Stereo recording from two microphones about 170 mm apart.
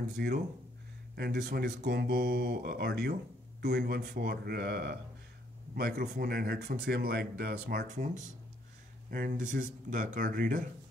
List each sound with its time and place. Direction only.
0.2 s speech: 65° right (ahead or behind)
7.9 s speech: 45° right (ahead or behind)